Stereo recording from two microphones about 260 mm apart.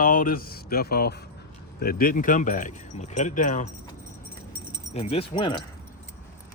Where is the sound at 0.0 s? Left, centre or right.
Left.